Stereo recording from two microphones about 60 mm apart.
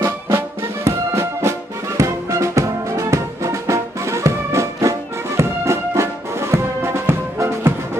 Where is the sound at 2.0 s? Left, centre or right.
Right.